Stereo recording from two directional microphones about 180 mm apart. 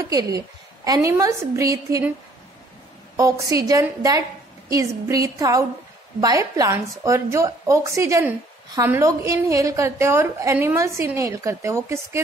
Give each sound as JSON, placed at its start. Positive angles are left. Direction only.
{"t": 0.0, "sound": "a woman's voice", "side_deg": -20}
{"t": 3.2, "sound": "a woman's voice", "side_deg": -15}